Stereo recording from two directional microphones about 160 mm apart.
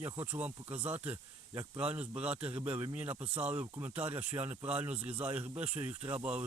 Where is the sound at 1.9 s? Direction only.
10° right (ahead or behind).